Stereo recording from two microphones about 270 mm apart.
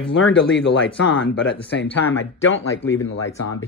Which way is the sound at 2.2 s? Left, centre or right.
Left.